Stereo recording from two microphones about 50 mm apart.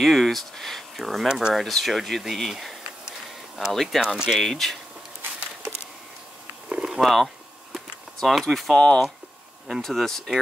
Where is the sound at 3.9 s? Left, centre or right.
Centre.